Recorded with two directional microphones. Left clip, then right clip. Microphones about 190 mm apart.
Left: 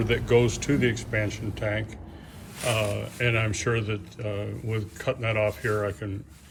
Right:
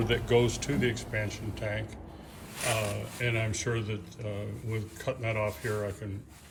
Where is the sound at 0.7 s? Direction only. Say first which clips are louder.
Left 5 dB; 50° right (ahead or behind).